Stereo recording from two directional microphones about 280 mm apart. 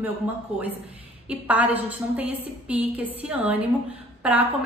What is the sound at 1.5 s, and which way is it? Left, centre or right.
A woman's voice, centre.